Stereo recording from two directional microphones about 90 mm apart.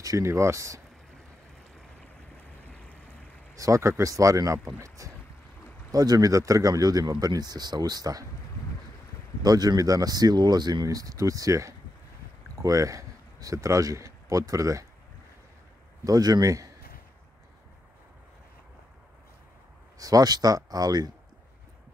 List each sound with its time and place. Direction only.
0.0 s speech: 35° right (ahead or behind)
3.5 s speech: 35° right (ahead or behind)
9.4 s speech: 45° right (ahead or behind)
16.0 s speech: 45° right (ahead or behind)
20.0 s speech: 45° right (ahead or behind)